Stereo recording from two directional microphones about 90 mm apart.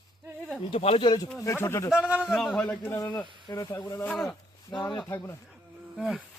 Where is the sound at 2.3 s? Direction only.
5° left (ahead or behind).